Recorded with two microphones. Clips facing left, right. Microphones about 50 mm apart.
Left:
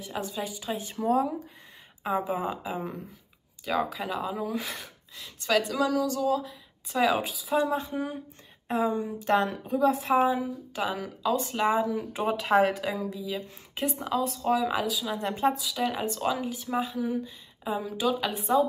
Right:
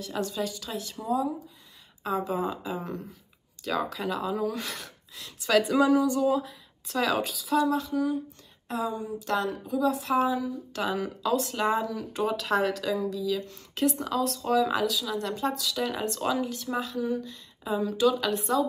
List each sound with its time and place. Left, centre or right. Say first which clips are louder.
0.0 s speech: right 3 dB; centre
1.0 s speech: left 3 dB; left
2.0 s speech: even; left; by 5.6 s centre
5.6 s a sound: right 7 dB; centre
6.2 s speech: right 1 dB; centre
6.9 s speech: left 2 dB; centre
7.5 s a woman's voice: right 2 dB; left
10.7 s speech: right 2 dB; centre
11.9 s speech: left 1 dB; left
15.0 s speech: left 3 dB; left
15.6 s speech: even; centre